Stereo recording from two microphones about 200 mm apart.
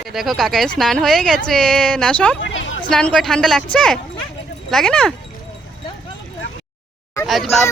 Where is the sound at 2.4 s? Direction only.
70° left (ahead or behind).